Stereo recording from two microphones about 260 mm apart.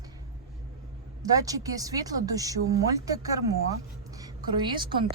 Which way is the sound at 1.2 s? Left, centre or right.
Centre.